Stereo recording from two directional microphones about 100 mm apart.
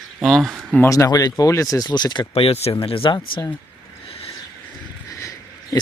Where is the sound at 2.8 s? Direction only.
65° left (ahead or behind).